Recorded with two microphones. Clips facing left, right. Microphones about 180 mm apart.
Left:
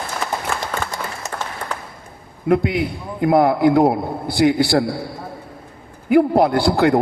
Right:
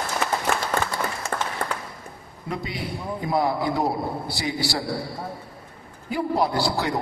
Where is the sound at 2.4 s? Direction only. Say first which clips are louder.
Left 13 dB; 60° left (ahead or behind).